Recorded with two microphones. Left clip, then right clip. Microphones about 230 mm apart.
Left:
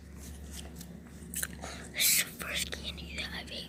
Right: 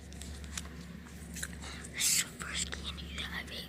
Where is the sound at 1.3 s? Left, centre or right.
Centre.